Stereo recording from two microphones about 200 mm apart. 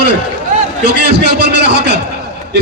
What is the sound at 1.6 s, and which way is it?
Speech, 55° right (ahead or behind).